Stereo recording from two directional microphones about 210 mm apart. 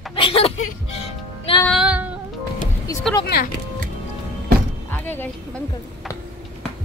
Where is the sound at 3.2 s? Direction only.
45° left (ahead or behind).